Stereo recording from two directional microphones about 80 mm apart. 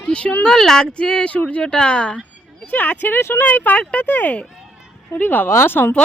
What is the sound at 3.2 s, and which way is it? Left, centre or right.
Speech, left.